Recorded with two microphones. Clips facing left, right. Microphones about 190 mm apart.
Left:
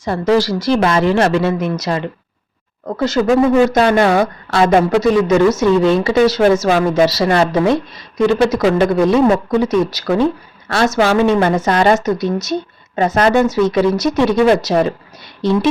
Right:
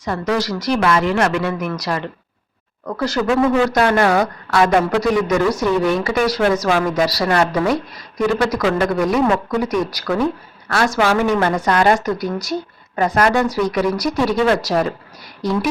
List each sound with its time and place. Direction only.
0.0 s a woman's voice: 30° left (ahead or behind)